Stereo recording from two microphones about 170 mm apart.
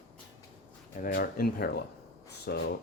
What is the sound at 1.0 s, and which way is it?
Speech, 60° left (ahead or behind).